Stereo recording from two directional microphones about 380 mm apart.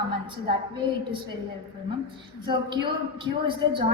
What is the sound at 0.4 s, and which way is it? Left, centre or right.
Speech, centre.